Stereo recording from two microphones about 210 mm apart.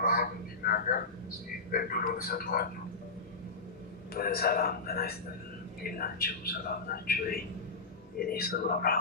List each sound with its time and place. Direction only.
0.0 s a sound: 45° left (ahead or behind)
1.7 s a man's voice: 45° left (ahead or behind)
4.1 s a man's voice: 45° left (ahead or behind)